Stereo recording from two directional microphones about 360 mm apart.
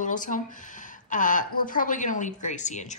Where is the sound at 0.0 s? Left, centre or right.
Left.